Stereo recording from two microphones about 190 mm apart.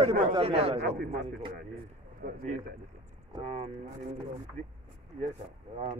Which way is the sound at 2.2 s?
45° right (ahead or behind).